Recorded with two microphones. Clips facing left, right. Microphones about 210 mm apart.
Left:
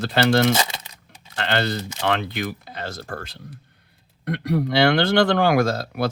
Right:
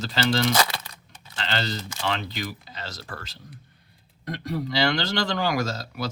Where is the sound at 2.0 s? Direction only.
60° left (ahead or behind).